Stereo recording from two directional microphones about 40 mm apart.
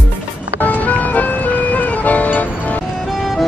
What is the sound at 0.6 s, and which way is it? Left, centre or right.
Music, left.